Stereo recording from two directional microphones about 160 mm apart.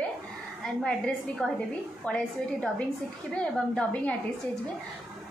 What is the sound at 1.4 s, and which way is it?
A woman's voice, 5° left (ahead or behind).